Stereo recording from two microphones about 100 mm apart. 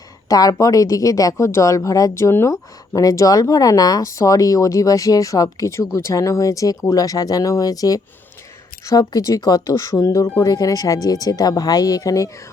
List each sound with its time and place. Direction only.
0.3 s speech: 35° left (ahead or behind)